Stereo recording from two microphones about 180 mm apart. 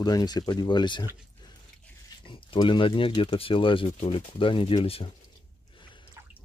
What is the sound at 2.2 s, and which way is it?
Speech, 25° left (ahead or behind).